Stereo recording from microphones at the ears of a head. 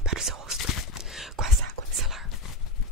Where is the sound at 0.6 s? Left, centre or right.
Left.